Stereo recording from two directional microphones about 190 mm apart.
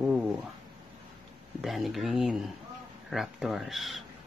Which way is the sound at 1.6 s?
Centre (ahead or behind).